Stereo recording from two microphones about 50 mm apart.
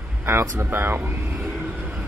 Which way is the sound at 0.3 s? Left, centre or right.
Right.